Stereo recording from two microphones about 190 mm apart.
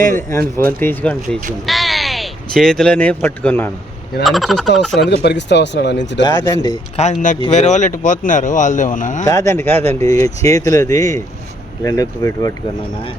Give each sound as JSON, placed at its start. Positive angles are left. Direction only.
{"t": 0.2, "sound": "speech", "side_deg": 15}
{"t": 4.9, "sound": "speech", "side_deg": 65}
{"t": 6.2, "sound": "speech", "side_deg": 20}
{"t": 6.9, "sound": "speech", "side_deg": 35}
{"t": 9.2, "sound": "speech", "side_deg": 15}